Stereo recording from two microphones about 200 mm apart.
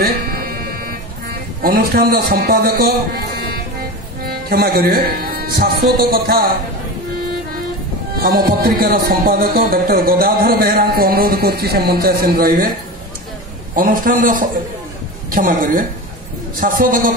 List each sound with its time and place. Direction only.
0.0 s electric shaver: 50° right (ahead or behind)
1.6 s a man's voice: 50° right (ahead or behind)
8.2 s speech: 45° right (ahead or behind)
13.7 s speech: 45° right (ahead or behind)